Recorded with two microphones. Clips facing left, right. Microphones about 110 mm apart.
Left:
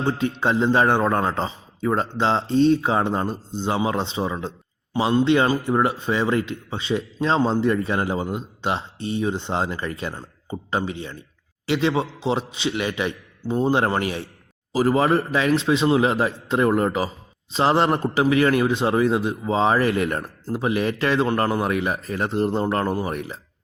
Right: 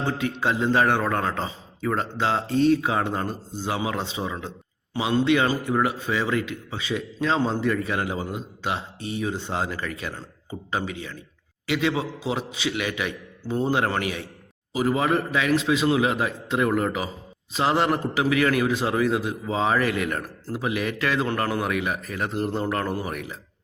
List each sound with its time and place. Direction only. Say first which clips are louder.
0.2 s a man's voice: left 3 dB; 30° left (ahead or behind)